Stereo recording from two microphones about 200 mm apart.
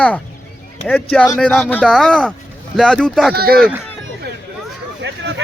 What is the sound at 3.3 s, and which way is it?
Speech, 50° right (ahead or behind).